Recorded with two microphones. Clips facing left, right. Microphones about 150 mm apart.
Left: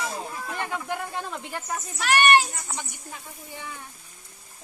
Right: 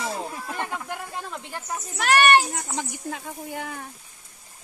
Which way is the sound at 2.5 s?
80° right.